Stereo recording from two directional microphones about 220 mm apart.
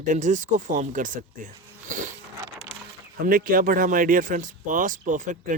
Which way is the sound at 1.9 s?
35° right (ahead or behind).